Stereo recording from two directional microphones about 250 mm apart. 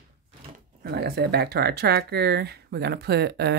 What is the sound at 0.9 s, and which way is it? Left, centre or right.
Speech, right.